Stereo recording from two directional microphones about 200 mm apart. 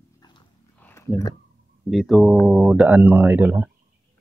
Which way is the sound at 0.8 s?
15° left (ahead or behind).